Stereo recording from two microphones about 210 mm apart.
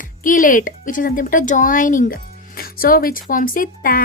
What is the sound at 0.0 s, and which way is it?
Speech, 40° left (ahead or behind).